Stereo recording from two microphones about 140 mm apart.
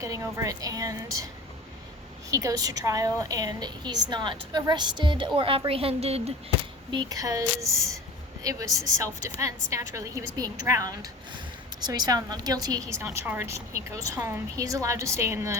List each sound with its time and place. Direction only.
0.0 s a woman's voice: 20° right (ahead or behind)
2.3 s a woman's voice: 25° right (ahead or behind); by 6.3 s 45° right (ahead or behind)
6.9 s a woman's voice: 30° right (ahead or behind)